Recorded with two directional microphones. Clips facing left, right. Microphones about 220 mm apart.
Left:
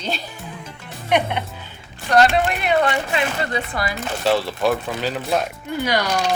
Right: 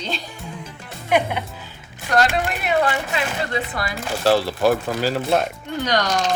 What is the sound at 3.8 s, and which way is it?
Speech, centre (ahead or behind).